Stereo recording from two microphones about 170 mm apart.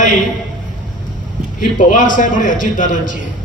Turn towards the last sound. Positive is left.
turn(degrees=50)  # may be behind; listen again after turning